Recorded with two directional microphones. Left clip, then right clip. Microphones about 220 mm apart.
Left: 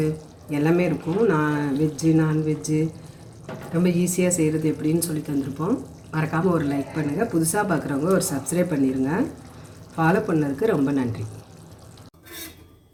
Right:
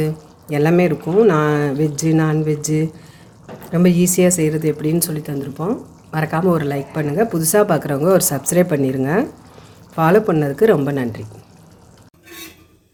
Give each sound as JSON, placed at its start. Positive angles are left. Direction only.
{"t": 0.5, "sound": "speech", "side_deg": -50}
{"t": 3.8, "sound": "speech", "side_deg": -55}